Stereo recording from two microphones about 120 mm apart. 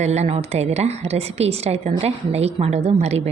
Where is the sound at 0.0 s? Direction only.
65° right (ahead or behind).